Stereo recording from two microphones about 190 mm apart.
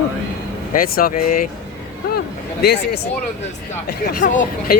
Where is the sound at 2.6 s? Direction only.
60° left (ahead or behind).